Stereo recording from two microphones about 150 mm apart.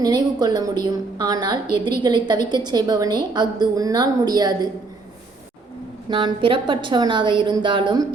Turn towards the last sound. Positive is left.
turn(degrees=-30)  # may be behind; listen again after turning